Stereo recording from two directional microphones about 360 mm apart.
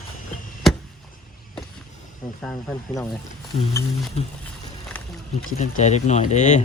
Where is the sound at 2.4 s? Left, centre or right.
Centre.